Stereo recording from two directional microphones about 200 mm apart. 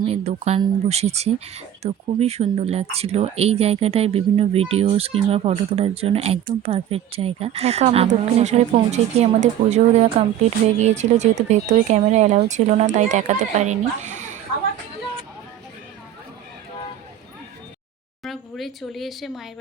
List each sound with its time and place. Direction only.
0.0 s speech: 30° right (ahead or behind)
18.2 s speech: centre (ahead or behind)